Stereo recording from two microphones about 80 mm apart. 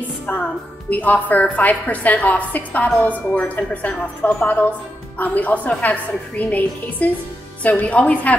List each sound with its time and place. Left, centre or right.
0.3 s a woman's voice: centre